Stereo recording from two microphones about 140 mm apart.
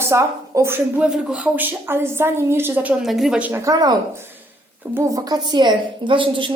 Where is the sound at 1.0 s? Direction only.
5° right (ahead or behind).